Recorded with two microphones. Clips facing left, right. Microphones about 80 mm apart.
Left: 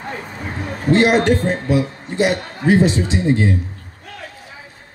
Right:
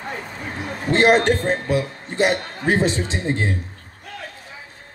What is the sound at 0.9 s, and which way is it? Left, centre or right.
A man's voice, right.